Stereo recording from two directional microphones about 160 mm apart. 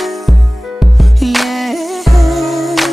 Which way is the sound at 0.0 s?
Centre (ahead or behind).